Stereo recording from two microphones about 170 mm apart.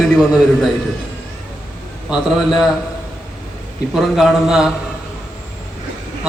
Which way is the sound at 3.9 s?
Centre (ahead or behind).